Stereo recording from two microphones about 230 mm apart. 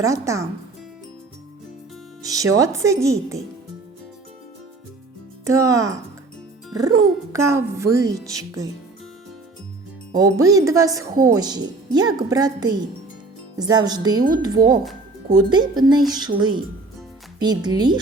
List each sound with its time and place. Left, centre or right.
0.0 s speech: centre
2.2 s speech: centre
5.5 s speech: centre
10.2 s speech: centre